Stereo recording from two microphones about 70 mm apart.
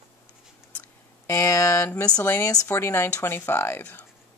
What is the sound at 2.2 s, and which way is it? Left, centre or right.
Speech, left.